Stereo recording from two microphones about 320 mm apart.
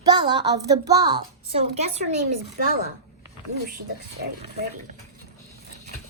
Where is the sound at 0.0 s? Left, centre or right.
Centre.